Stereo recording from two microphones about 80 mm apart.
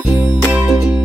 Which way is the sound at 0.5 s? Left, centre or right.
Centre.